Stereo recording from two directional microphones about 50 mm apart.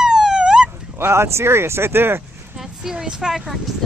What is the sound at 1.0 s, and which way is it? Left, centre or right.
Speech, right.